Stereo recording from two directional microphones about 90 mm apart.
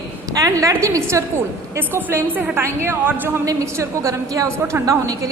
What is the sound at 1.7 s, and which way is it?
A woman's voice, 20° right (ahead or behind).